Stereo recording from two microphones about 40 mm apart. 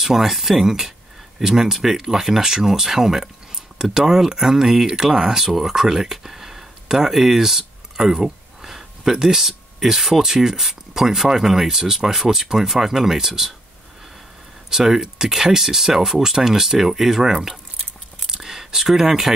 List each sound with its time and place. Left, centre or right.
0.0 s speech: centre
14.7 s speech: centre
18.2 s a sound: centre